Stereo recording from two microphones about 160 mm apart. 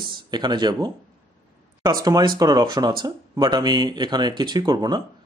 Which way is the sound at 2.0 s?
25° right (ahead or behind).